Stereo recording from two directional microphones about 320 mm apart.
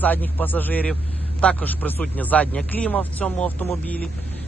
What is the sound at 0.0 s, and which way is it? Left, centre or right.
Speech, centre.